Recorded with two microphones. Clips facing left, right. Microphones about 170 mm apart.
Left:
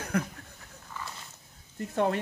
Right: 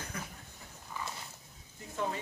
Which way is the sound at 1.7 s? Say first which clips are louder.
Left 9 dB; 70° left (ahead or behind).